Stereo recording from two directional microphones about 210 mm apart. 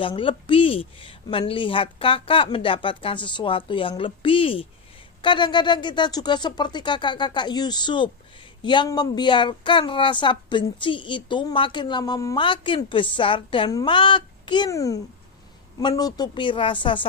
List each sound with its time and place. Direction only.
0.0 s a woman's voice: 25° left (ahead or behind)